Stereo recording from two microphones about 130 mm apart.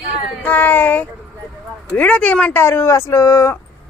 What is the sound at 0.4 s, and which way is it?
Child singing, 15° left (ahead or behind).